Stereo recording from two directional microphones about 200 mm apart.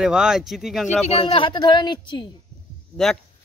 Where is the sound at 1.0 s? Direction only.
30° left (ahead or behind).